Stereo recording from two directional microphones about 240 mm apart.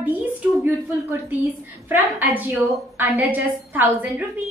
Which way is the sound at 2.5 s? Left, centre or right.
Centre.